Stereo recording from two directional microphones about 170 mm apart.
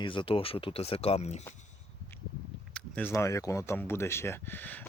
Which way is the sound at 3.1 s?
20° left (ahead or behind).